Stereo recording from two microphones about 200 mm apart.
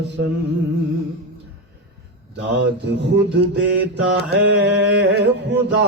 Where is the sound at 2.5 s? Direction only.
60° right (ahead or behind).